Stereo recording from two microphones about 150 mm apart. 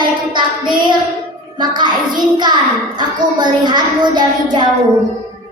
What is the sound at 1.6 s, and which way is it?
A woman's voice, 30° right (ahead or behind).